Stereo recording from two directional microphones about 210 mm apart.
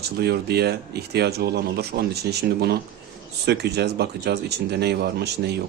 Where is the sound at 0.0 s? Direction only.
50° right (ahead or behind).